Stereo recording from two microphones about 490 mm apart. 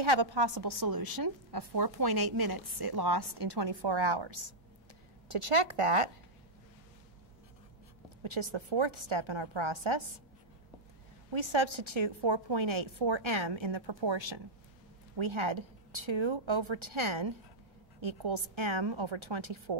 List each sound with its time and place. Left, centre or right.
0.0 s a woman's voice: right
5.3 s a woman's voice: right
8.2 s a woman's voice: right
11.3 s a woman's voice: right
15.1 s a woman's voice: right